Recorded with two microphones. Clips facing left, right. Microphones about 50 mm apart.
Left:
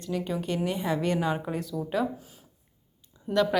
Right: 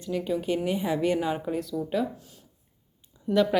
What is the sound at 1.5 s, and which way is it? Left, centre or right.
Speech, centre.